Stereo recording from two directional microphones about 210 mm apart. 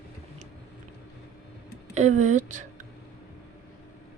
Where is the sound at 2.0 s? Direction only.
35° right (ahead or behind).